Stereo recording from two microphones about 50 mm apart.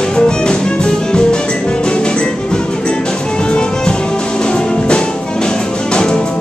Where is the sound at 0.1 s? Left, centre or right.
Centre.